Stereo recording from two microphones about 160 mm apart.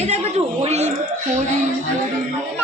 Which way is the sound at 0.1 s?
40° right (ahead or behind).